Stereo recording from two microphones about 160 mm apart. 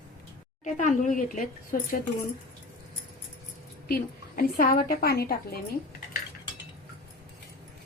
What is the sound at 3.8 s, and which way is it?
Speech, 70° left (ahead or behind).